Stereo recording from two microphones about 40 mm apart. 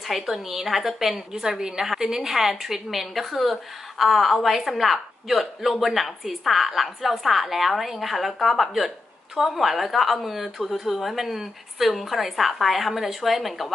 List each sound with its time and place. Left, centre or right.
0.1 s a woman's voice: centre